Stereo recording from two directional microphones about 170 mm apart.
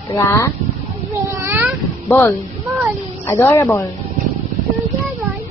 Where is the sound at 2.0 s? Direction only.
15° left (ahead or behind).